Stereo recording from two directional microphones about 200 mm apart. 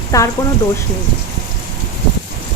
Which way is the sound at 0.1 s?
15° left (ahead or behind).